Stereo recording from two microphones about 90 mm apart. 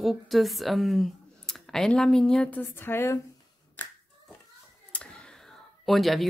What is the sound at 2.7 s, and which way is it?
Speech, 25° left (ahead or behind).